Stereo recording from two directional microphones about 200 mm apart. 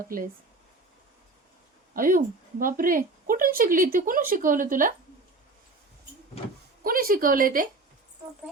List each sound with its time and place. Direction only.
1.9 s a woman's voice: 45° right (ahead or behind)
6.8 s a woman's voice: 45° right (ahead or behind)